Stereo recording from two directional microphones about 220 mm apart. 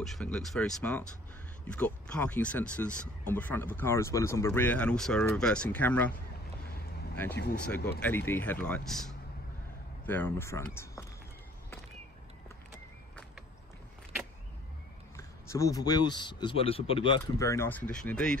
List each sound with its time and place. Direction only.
0.0 s speech: centre (ahead or behind)
7.6 s speech: 5° left (ahead or behind)
15.1 s speech: 15° left (ahead or behind)